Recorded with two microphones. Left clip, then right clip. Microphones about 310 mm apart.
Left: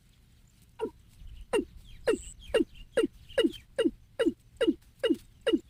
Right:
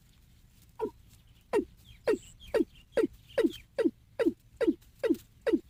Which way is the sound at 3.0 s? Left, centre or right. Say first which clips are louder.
Left 1 dB; centre.